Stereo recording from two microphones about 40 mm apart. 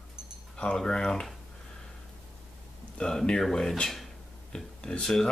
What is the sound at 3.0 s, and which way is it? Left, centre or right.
Speech, centre.